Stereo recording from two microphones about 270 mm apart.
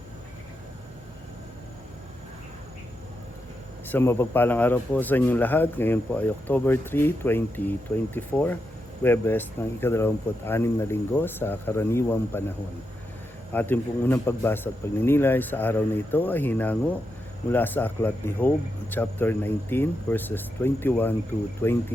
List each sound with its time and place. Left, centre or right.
3.8 s speech: centre
13.5 s speech: centre